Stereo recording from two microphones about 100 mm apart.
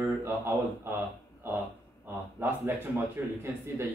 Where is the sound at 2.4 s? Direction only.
25° right (ahead or behind).